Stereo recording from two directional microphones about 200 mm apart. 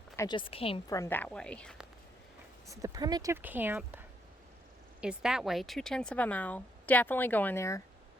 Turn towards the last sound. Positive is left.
turn(degrees=15)  # may be behind; listen again after turning